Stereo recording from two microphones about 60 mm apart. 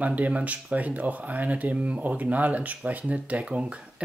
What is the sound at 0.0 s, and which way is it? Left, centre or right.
Speech, right.